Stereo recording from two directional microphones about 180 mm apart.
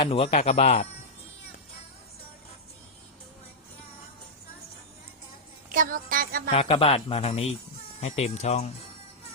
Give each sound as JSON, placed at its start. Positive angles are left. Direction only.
{"t": 0.0, "sound": "speech", "side_deg": 30}
{"t": 5.7, "sound": "music", "side_deg": -50}
{"t": 6.5, "sound": "speech", "side_deg": 30}